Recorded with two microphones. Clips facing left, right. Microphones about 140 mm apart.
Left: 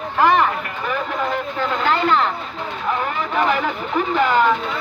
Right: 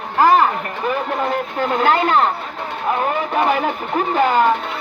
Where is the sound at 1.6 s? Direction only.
50° right (ahead or behind).